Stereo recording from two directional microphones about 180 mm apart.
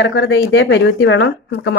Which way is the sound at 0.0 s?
75° left (ahead or behind).